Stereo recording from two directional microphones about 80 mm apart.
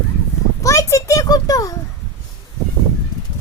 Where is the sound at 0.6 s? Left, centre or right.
Left.